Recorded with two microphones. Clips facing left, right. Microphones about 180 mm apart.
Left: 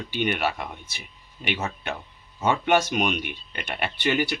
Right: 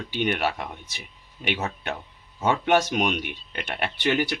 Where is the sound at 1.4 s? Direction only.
5° right (ahead or behind).